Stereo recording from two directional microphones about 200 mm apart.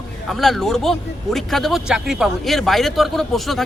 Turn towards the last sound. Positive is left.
turn(degrees=0)  # may be behind; listen again after turning